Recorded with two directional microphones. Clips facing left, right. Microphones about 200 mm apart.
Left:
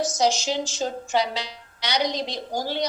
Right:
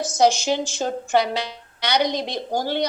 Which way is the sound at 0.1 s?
55° right (ahead or behind).